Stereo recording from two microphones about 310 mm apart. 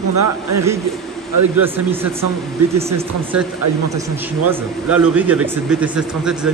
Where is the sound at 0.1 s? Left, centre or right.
Right.